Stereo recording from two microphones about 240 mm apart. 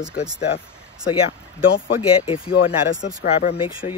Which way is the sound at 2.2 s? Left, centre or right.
Left.